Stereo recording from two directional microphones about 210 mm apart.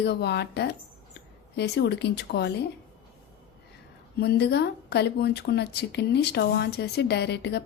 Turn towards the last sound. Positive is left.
turn(degrees=55)  # may be behind; listen again after turning